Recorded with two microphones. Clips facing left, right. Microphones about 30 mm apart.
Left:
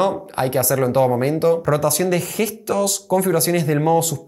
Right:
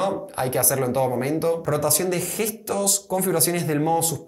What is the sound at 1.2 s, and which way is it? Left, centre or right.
Speech, left.